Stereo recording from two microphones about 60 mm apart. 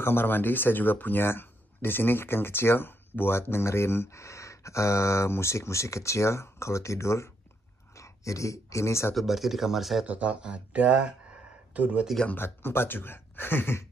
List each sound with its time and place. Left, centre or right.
0.0 s speech: left
9.1 s speech: centre
10.0 s speech: right
12.4 s speech: left